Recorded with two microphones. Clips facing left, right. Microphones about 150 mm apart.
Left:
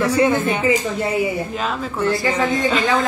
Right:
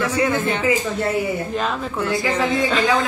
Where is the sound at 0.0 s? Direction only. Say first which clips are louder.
Left 4 dB; 35° left (ahead or behind).